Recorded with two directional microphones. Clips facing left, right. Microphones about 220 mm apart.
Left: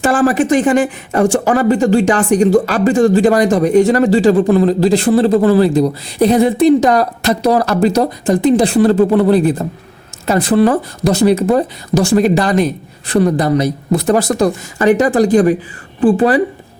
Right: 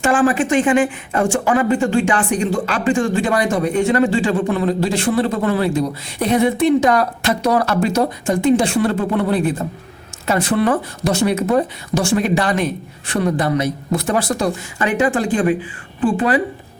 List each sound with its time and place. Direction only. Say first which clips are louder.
0.0 s speech: left 3 dB; 40° left (ahead or behind)